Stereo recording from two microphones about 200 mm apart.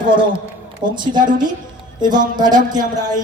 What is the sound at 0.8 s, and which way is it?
A woman's voice, 20° right (ahead or behind).